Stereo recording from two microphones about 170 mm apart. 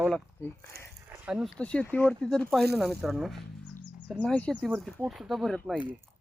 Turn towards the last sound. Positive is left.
turn(degrees=0)  # may be behind; listen again after turning